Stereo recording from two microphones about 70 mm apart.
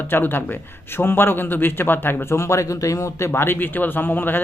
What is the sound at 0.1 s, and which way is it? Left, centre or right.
Speech, left.